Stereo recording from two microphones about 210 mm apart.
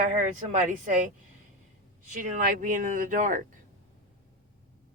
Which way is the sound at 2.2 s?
40° right (ahead or behind).